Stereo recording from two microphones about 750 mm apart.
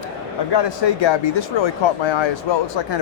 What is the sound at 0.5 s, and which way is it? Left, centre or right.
Speech, left.